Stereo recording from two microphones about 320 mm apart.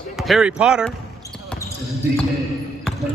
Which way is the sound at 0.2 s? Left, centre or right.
Centre.